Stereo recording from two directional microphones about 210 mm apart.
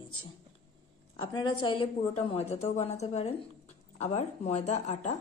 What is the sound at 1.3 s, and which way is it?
A woman's voice, 20° left (ahead or behind).